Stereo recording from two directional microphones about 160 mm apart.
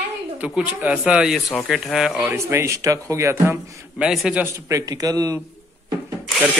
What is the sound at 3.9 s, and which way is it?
Speech, 5° right (ahead or behind).